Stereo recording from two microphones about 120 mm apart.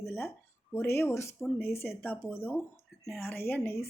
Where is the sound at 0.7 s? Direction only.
20° left (ahead or behind).